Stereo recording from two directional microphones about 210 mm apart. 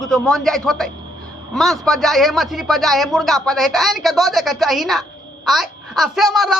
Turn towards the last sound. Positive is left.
turn(degrees=0)  # may be behind; listen again after turning